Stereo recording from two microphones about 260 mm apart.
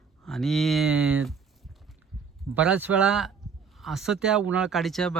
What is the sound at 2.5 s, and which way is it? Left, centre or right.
Speech, centre.